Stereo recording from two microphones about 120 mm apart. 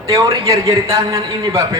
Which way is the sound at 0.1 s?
25° right (ahead or behind).